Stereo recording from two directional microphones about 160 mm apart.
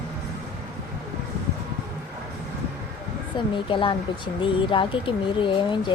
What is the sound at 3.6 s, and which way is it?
A woman's voice, 35° left (ahead or behind).